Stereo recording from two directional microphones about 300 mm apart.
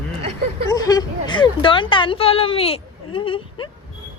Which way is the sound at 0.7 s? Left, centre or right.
Centre.